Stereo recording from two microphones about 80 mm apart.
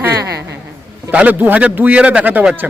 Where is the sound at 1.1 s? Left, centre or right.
Centre.